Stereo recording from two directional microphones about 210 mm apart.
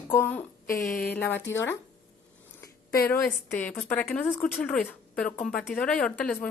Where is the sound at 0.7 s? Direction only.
40° left (ahead or behind).